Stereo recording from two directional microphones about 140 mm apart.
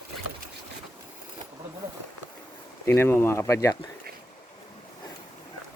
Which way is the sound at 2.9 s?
15° left (ahead or behind).